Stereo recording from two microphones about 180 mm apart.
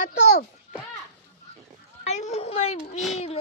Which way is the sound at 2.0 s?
40° left (ahead or behind).